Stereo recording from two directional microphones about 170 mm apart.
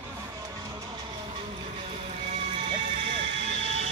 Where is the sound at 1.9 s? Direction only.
40° right (ahead or behind).